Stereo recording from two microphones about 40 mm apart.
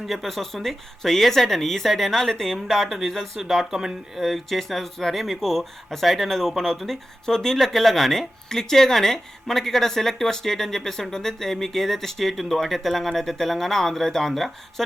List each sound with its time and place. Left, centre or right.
0.0 s speech: centre
4.2 s speech: centre
8.4 s speech: centre